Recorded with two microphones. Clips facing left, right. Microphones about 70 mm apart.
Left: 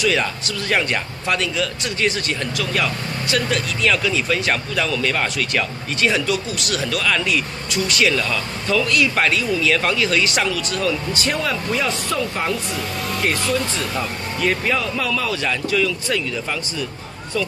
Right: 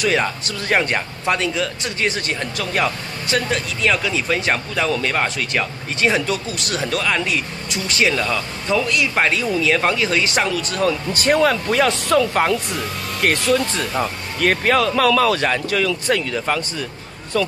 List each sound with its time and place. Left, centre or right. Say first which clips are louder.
0.2 s speech: right 1 dB; right
15.4 s speech: right 1 dB; right